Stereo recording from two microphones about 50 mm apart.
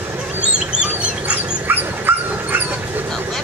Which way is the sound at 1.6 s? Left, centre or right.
Right.